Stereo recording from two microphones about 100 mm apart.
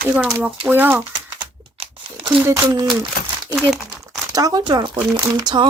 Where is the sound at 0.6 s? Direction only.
20° right (ahead or behind).